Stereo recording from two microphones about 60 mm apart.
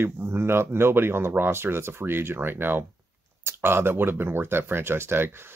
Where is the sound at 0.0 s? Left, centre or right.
Right.